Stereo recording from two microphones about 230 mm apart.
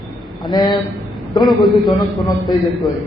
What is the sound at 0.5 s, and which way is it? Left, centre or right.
Speech, centre.